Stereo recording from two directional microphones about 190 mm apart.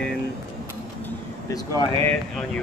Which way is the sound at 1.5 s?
20° left (ahead or behind).